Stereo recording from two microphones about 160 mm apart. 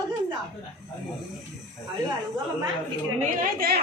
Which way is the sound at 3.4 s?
70° right (ahead or behind).